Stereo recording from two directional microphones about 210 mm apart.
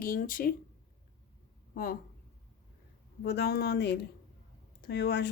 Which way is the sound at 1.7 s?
45° left (ahead or behind).